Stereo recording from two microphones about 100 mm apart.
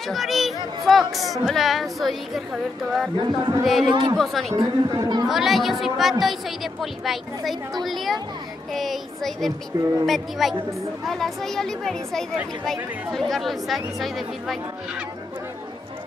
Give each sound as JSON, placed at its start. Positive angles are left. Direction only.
{"t": 0.1, "sound": "chatter", "side_deg": 0}
{"t": 0.8, "sound": "a woman's voice", "side_deg": 0}
{"t": 3.2, "sound": "speech", "side_deg": -45}
{"t": 3.6, "sound": "a woman's voice", "side_deg": 0}
{"t": 3.9, "sound": "speech", "side_deg": -50}
{"t": 4.2, "sound": "a woman's voice", "side_deg": 0}
{"t": 4.6, "sound": "speech", "side_deg": -40}
{"t": 5.3, "sound": "a woman's voice", "side_deg": 0}